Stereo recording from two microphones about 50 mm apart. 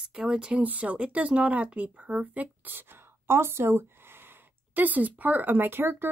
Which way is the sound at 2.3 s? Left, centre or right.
Right.